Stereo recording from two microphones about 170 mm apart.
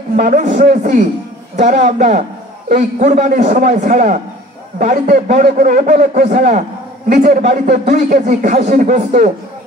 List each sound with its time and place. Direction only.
0.1 s a man's voice: 45° right (ahead or behind)